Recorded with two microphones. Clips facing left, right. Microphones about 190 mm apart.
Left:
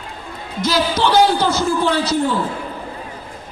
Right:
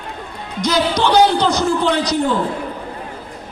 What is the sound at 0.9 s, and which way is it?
Speech, 5° left (ahead or behind).